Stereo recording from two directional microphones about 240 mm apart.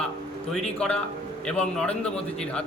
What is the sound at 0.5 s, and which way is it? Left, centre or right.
A man's voice, centre.